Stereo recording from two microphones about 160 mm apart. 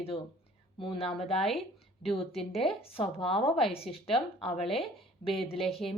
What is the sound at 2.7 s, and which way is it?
Speech, 35° left (ahead or behind).